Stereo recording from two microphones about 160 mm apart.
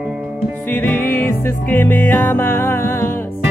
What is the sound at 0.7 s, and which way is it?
Music, 10° left (ahead or behind).